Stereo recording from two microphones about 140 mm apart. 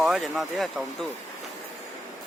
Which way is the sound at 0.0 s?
Centre (ahead or behind).